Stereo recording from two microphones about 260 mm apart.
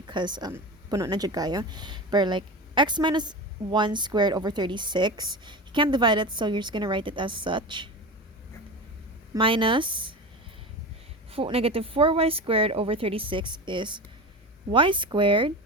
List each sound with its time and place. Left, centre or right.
0.1 s a woman's voice: centre
9.3 s speech: centre
11.3 s speech: right